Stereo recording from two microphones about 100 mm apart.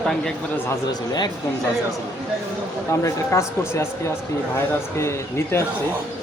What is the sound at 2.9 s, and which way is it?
Speech, 30° left (ahead or behind).